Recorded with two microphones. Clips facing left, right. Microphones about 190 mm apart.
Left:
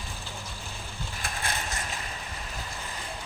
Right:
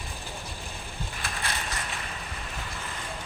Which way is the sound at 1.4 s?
45° left (ahead or behind).